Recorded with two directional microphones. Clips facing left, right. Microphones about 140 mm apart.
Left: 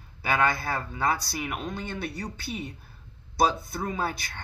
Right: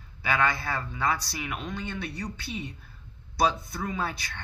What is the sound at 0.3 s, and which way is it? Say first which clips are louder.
A man's voice: left 1 dB; 40° left (ahead or behind).